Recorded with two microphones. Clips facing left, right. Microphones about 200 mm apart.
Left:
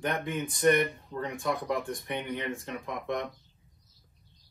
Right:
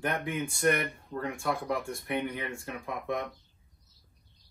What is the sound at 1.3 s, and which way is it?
Speech, 15° left (ahead or behind).